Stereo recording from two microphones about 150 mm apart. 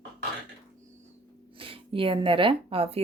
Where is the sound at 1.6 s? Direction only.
35° right (ahead or behind).